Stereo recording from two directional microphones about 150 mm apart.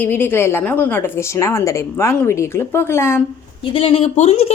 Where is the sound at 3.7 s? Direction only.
40° left (ahead or behind).